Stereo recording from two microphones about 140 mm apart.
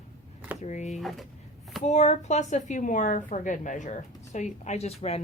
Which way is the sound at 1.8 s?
55° left (ahead or behind).